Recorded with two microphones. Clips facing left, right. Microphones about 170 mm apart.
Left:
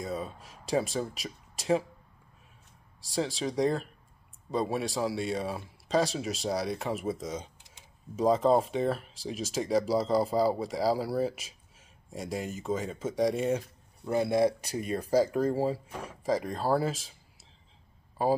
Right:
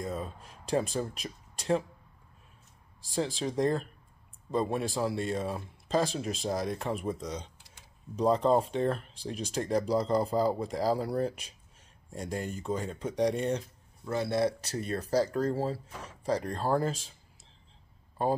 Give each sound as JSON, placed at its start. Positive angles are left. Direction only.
{"t": 0.0, "sound": "speech", "side_deg": 0}
{"t": 3.3, "sound": "speech", "side_deg": 0}
{"t": 14.0, "sound": "speech", "side_deg": 15}
{"t": 15.9, "sound": "speech", "side_deg": 55}
{"t": 16.3, "sound": "speech", "side_deg": 10}